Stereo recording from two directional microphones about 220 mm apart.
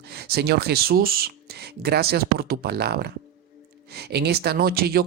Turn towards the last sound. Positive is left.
turn(degrees=-45)  # may be behind; listen again after turning